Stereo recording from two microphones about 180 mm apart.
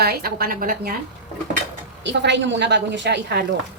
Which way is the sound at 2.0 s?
80° right.